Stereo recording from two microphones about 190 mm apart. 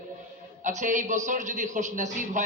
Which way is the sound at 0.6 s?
40° right (ahead or behind).